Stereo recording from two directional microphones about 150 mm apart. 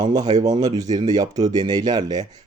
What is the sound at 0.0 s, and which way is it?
Speech, 25° right (ahead or behind).